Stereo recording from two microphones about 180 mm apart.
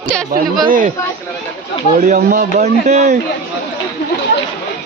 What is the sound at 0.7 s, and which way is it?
Speech, 50° right (ahead or behind).